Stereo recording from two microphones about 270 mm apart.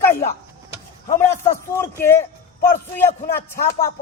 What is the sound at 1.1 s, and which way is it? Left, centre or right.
Speech, centre.